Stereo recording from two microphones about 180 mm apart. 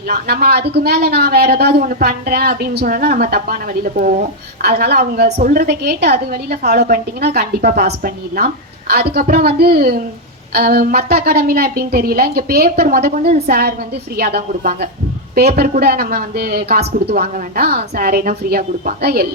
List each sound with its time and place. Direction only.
0.1 s speech: 60° right (ahead or behind)